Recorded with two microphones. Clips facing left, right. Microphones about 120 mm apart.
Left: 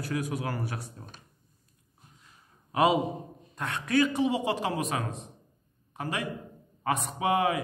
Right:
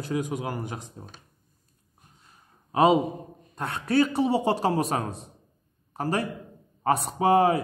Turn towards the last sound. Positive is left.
turn(degrees=-35)  # may be behind; listen again after turning